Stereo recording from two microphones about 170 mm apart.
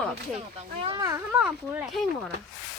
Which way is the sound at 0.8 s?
30° right (ahead or behind).